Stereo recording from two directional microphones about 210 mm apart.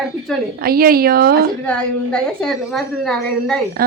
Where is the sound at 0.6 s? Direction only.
45° right (ahead or behind).